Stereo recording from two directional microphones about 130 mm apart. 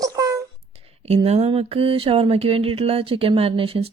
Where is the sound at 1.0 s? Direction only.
55° right (ahead or behind).